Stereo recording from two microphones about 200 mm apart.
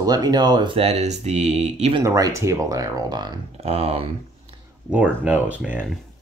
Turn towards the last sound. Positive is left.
turn(degrees=-5)  # may be behind; listen again after turning